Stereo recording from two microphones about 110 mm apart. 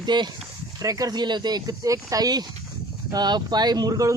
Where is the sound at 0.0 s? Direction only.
40° right (ahead or behind).